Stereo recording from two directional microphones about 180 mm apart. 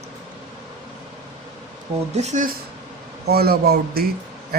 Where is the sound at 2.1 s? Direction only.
40° right (ahead or behind).